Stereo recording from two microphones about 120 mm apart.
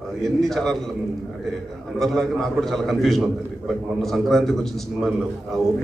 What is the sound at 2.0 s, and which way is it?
A man's voice, 5° left (ahead or behind).